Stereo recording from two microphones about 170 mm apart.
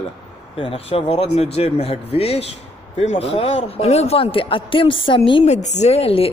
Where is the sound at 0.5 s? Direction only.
30° left (ahead or behind).